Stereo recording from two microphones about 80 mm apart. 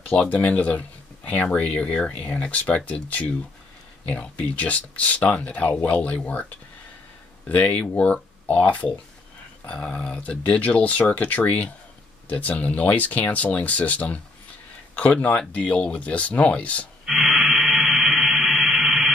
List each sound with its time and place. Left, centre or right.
0.0 s speech: centre
7.4 s speech: centre
17.0 s a sound: centre